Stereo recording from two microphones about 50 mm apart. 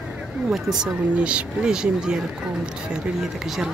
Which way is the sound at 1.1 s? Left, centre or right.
Right.